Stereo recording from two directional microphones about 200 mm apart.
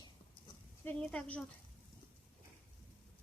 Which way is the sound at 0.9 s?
5° left (ahead or behind).